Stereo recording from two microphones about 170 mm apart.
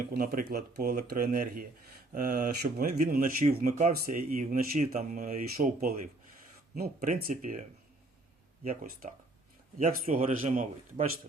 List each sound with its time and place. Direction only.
0.2 s speech: 55° right (ahead or behind)
3.7 s speech: 40° right (ahead or behind)
3.9 s speech: 60° right (ahead or behind)
8.6 s speech: 50° right (ahead or behind)